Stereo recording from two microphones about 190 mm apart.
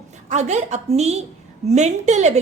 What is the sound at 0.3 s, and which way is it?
A woman's voice, 35° right (ahead or behind).